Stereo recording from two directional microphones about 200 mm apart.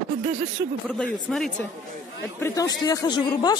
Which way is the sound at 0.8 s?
5° left (ahead or behind).